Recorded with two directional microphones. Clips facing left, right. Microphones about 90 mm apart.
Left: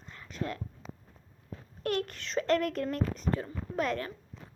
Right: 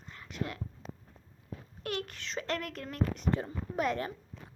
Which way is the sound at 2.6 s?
45° left (ahead or behind).